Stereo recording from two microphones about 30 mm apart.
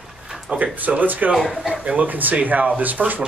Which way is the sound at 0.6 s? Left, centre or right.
Right.